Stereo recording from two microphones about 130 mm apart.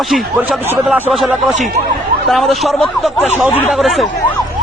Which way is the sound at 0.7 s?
15° right (ahead or behind).